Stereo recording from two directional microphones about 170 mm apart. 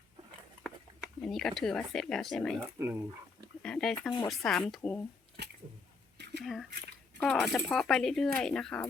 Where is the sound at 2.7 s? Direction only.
15° right (ahead or behind).